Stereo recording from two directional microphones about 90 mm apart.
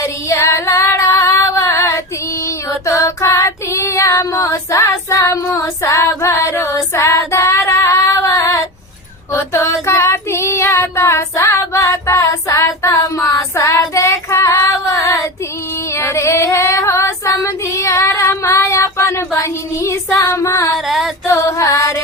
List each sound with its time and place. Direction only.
0.0 s female singing: 35° left (ahead or behind)
2.8 s child singing: 35° left (ahead or behind)
16.0 s female singing: 30° left (ahead or behind)
20.7 s a sound: centre (ahead or behind)
21.2 s music: 30° left (ahead or behind)